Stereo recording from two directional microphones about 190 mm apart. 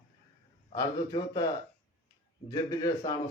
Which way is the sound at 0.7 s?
20° left (ahead or behind).